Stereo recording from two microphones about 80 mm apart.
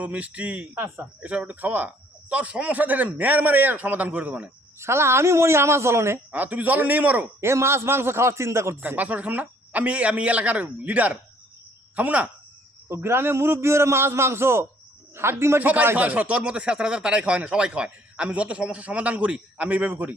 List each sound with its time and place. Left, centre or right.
0.0 s speech: centre
4.8 s a man's voice: right
6.3 s speech: right
7.4 s a man's voice: right
8.8 s speech: centre
12.9 s a man's voice: right
15.6 s speech: right